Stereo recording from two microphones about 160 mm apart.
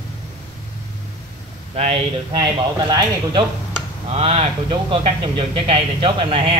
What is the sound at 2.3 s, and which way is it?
Speech, 25° right (ahead or behind).